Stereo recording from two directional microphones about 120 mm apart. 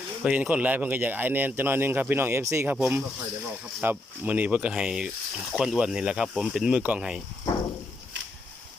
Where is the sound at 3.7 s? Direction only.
15° right (ahead or behind).